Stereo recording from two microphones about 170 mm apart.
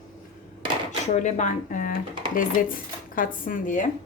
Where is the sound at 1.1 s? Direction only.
45° left (ahead or behind).